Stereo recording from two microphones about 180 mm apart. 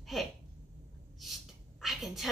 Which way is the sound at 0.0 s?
Centre (ahead or behind).